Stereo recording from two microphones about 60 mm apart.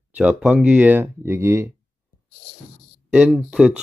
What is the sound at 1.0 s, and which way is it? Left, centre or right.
Speech, right.